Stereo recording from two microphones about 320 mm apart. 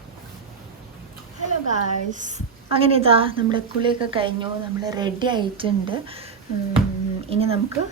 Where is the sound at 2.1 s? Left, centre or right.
Right.